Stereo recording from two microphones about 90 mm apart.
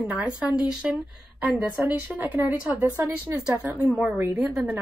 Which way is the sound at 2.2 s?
15° right (ahead or behind).